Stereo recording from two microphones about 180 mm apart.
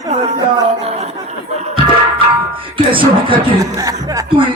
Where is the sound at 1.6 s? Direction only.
30° right (ahead or behind).